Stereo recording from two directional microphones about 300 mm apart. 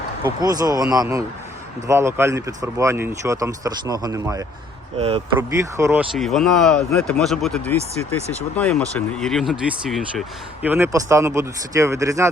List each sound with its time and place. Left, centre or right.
0.3 s speech: centre
5.4 s speech: centre